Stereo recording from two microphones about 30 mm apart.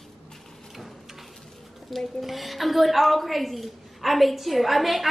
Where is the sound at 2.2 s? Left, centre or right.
Centre.